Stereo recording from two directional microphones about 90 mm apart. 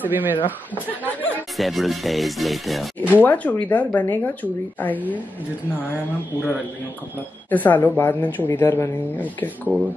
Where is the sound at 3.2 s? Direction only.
15° left (ahead or behind).